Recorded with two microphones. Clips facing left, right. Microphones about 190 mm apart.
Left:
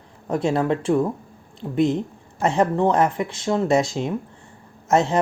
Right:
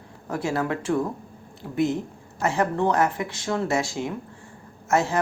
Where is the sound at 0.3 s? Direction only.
25° left (ahead or behind).